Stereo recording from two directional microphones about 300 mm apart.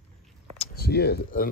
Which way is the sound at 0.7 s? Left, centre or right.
Left.